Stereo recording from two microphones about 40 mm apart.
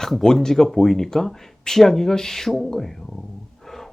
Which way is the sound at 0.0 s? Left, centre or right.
Centre.